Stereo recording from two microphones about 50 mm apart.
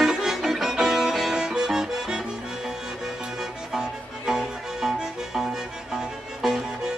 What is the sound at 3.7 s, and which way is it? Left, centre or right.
Music, centre.